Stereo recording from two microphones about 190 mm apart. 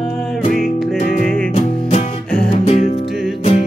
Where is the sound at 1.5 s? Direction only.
35° left (ahead or behind).